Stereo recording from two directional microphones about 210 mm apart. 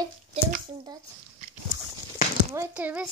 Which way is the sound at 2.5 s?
10° right (ahead or behind).